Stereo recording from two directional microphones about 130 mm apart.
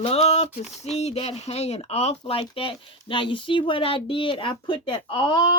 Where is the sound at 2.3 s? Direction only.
45° left (ahead or behind).